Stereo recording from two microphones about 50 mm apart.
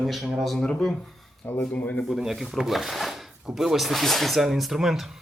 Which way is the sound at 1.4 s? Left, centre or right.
Left.